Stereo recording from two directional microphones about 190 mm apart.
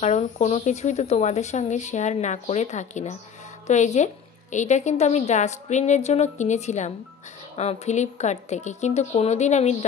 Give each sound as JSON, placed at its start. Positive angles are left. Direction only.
{"t": 0.0, "sound": "a woman's voice", "side_deg": 35}